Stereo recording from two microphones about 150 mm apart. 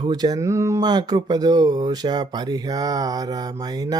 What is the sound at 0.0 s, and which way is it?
Speech, 25° right (ahead or behind).